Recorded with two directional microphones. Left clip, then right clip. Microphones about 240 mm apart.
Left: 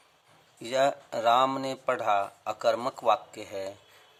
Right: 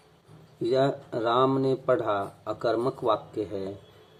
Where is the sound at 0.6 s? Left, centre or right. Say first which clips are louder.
Right 1 dB; left.